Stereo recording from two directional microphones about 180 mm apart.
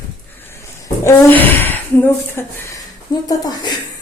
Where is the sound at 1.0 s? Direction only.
10° left (ahead or behind).